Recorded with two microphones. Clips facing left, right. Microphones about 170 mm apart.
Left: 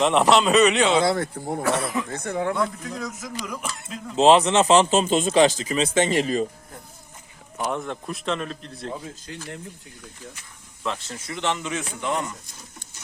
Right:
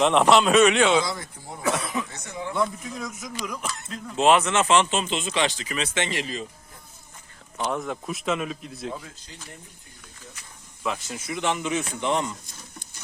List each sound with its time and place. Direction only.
0.0 s speech: centre (ahead or behind)
0.9 s speech: 60° left (ahead or behind)
1.6 s speech: centre (ahead or behind)
2.0 s speech: 55° left (ahead or behind)
2.6 s speech: centre (ahead or behind)
4.2 s speech: 30° left (ahead or behind)
7.6 s speech: centre (ahead or behind)
9.2 s speech: 65° left (ahead or behind)
10.8 s speech: 10° right (ahead or behind)